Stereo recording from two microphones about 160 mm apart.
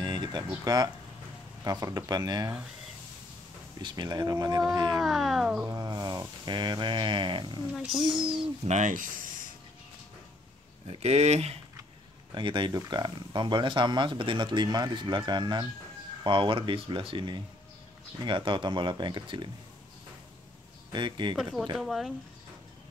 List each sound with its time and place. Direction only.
0.0 s speech: 25° right (ahead or behind)
3.8 s speech: 25° right (ahead or behind)
5.0 s speech: centre (ahead or behind)
5.7 s speech: 25° right (ahead or behind)
7.7 s speech: centre (ahead or behind)
8.6 s speech: 50° right (ahead or behind)
10.9 s speech: 45° right (ahead or behind)
12.4 s speech: 30° right (ahead or behind)
20.9 s speech: 30° right (ahead or behind)
21.7 s speech: centre (ahead or behind)